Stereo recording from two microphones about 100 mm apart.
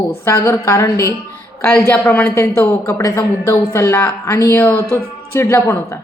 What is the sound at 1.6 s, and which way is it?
Speech, 15° left (ahead or behind).